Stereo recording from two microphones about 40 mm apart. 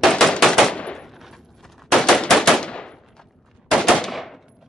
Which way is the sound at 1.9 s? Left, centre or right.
Centre.